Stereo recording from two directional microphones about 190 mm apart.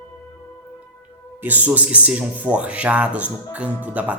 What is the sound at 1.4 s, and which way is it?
Speech, 10° right (ahead or behind).